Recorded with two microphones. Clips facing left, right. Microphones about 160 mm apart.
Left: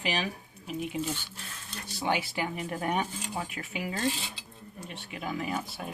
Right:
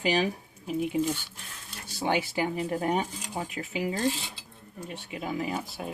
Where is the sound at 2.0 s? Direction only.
30° right (ahead or behind).